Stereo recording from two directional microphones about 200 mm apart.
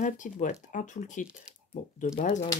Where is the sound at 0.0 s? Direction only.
40° left (ahead or behind).